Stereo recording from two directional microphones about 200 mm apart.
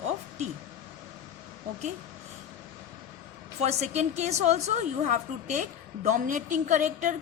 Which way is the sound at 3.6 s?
35° right (ahead or behind).